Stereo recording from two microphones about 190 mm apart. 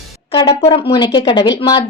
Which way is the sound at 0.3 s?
25° left (ahead or behind).